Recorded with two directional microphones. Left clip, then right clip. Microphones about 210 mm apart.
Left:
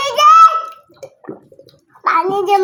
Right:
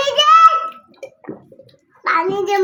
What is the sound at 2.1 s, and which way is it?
Speech, 25° left (ahead or behind).